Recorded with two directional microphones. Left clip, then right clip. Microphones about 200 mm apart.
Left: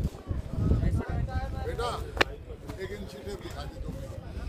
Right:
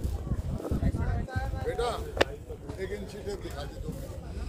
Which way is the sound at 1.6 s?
30° left (ahead or behind).